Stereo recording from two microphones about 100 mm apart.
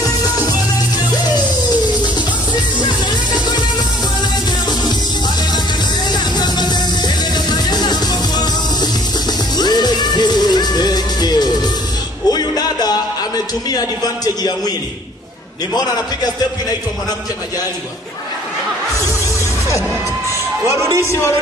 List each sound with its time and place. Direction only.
6.1 s music: 45° left (ahead or behind)
9.6 s music: 45° left (ahead or behind)
13.7 s a man's voice: 40° left (ahead or behind)
20.6 s a man's voice: 30° left (ahead or behind)